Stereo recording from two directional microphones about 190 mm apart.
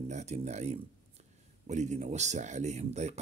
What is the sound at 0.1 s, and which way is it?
Speech, 35° right (ahead or behind).